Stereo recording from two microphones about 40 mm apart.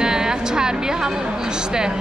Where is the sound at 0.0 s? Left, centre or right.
Centre.